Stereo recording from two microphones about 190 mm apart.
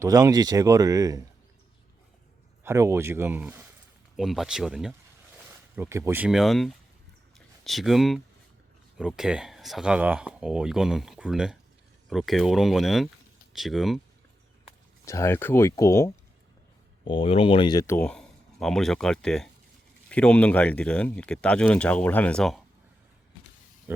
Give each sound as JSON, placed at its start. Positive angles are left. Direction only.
{"t": 0.0, "sound": "speech", "side_deg": -20}
{"t": 2.6, "sound": "speech", "side_deg": -15}
{"t": 15.0, "sound": "speech", "side_deg": 15}
{"t": 17.1, "sound": "speech", "side_deg": 30}